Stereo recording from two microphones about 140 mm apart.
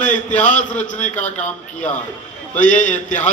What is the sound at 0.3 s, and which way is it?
Speech, 10° left (ahead or behind).